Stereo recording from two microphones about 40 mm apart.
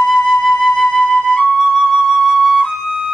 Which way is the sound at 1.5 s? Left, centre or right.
Centre.